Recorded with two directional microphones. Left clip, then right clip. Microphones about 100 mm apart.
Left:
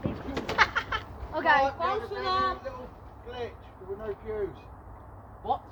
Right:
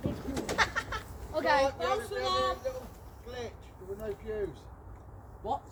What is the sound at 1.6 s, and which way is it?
Speech, centre (ahead or behind).